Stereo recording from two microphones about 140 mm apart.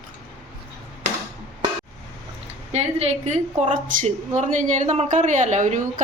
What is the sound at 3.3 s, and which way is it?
A woman's voice, 55° right (ahead or behind).